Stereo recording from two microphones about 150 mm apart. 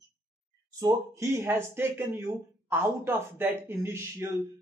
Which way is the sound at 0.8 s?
25° right (ahead or behind).